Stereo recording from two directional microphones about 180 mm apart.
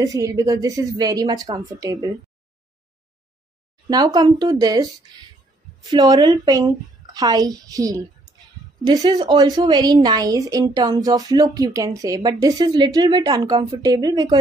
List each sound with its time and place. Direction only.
0.0 s a woman's voice: 20° right (ahead or behind)
3.9 s a woman's voice: 20° right (ahead or behind)
5.9 s a woman's voice: 20° right (ahead or behind)